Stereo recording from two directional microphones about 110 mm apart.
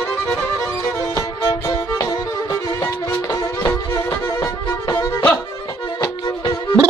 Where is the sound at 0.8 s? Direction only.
30° left (ahead or behind).